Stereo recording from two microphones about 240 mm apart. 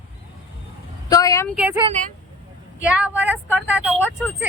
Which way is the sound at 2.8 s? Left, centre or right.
Centre.